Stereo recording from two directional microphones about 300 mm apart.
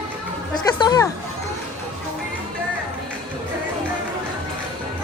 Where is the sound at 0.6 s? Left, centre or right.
Centre.